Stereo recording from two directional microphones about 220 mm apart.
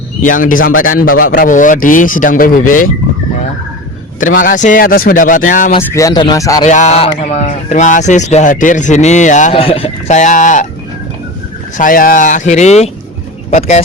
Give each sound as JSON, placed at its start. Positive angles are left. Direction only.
{"t": 0.2, "sound": "speech", "side_deg": 35}
{"t": 4.2, "sound": "speech", "side_deg": 40}
{"t": 5.8, "sound": "speech", "side_deg": 15}
{"t": 6.7, "sound": "speech", "side_deg": 30}
{"t": 11.8, "sound": "speech", "side_deg": 40}